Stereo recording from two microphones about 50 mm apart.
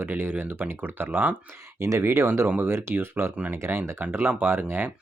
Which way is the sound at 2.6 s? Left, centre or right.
Right.